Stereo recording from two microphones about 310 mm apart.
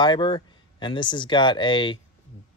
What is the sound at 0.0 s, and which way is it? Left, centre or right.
Speech, centre.